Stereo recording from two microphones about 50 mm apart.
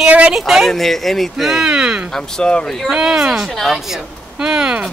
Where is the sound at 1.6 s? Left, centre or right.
Centre.